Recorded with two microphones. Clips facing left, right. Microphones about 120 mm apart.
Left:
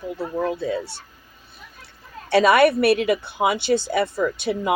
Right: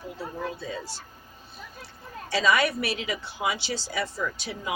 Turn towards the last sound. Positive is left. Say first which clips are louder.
# left 10 dB
turn(degrees=60)  # may be behind; listen again after turning